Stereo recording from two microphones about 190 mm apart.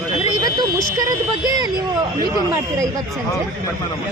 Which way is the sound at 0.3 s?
20° right (ahead or behind).